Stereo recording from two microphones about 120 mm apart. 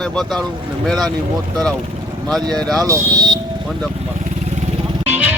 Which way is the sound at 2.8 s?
30° right (ahead or behind).